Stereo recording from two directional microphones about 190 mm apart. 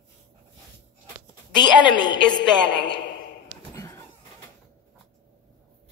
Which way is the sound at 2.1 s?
65° left (ahead or behind).